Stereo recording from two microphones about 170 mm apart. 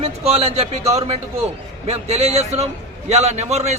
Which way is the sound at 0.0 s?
40° right (ahead or behind).